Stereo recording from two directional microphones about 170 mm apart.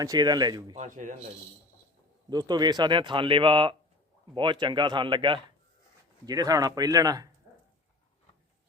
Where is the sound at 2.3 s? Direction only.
25° right (ahead or behind).